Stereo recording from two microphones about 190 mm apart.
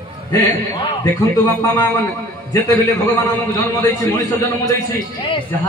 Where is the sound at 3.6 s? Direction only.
15° left (ahead or behind).